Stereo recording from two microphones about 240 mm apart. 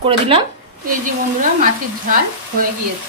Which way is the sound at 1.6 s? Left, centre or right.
Right.